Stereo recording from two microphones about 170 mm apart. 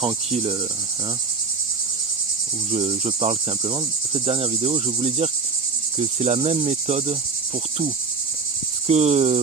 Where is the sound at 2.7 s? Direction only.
35° right (ahead or behind).